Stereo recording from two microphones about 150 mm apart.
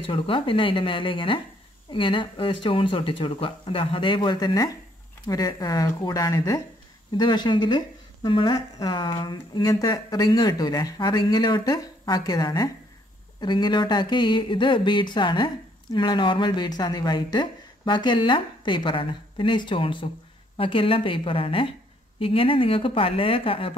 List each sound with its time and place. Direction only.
0.0 s speech: 35° left (ahead or behind)